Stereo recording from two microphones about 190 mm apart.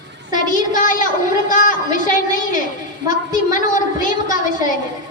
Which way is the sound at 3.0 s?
20° right (ahead or behind).